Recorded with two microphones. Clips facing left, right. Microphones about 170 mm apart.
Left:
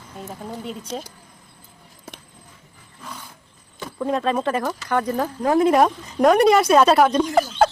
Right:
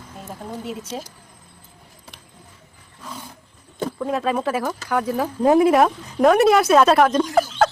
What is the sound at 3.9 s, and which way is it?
A woman's voice, 5° right (ahead or behind).